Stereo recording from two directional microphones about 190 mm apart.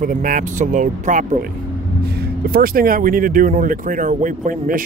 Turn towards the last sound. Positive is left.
turn(degrees=-45)  # may be behind; listen again after turning